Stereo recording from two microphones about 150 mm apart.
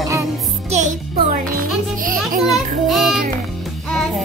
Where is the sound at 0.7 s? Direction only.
55° right (ahead or behind).